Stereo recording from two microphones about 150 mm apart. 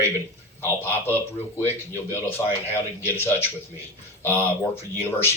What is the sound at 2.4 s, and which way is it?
A man's voice, 25° left (ahead or behind).